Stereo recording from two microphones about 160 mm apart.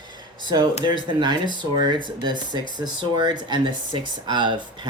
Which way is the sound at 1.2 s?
30° right (ahead or behind).